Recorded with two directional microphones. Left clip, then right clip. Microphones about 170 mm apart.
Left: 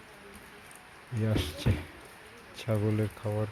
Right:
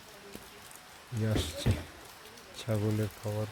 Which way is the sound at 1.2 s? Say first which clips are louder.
Left 1 dB; 10° right (ahead or behind).